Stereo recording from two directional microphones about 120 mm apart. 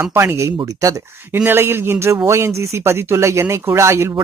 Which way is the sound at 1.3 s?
20° right (ahead or behind).